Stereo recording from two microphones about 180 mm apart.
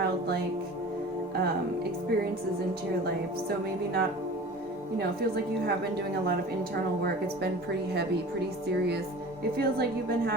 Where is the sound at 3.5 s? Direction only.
60° right (ahead or behind).